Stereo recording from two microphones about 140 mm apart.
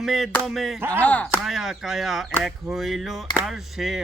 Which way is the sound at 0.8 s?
15° right (ahead or behind).